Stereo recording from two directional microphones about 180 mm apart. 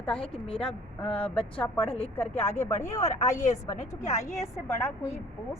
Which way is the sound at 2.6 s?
15° left (ahead or behind).